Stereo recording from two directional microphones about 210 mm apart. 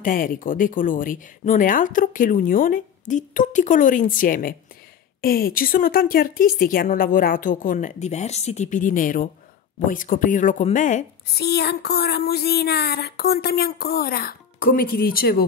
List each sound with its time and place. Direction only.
0.0 s speech: 40° left (ahead or behind)
11.3 s speech: 50° left (ahead or behind)